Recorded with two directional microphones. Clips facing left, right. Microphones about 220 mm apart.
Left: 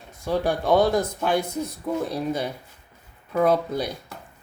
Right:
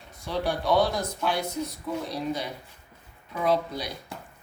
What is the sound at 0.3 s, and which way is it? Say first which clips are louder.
Speech: left 5 dB; 50° left (ahead or behind).